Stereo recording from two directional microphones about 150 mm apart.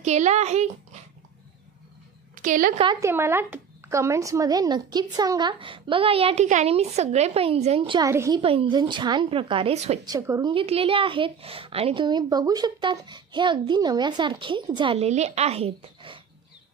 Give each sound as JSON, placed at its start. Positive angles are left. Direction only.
{"t": 0.0, "sound": "a woman's voice", "side_deg": -50}
{"t": 2.3, "sound": "a woman's voice", "side_deg": -60}
{"t": 3.0, "sound": "a woman's voice", "side_deg": -15}
{"t": 8.1, "sound": "speech", "side_deg": -20}
{"t": 8.4, "sound": "a woman's voice", "side_deg": -40}
{"t": 10.0, "sound": "speech", "side_deg": -20}
{"t": 10.5, "sound": "a woman's voice", "side_deg": -40}
{"t": 15.0, "sound": "a woman's voice", "side_deg": -45}